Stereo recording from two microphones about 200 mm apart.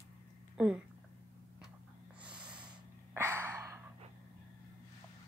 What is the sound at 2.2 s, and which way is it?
Snort, 5° right (ahead or behind).